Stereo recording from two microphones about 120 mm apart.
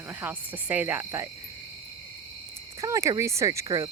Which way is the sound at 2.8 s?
25° right (ahead or behind).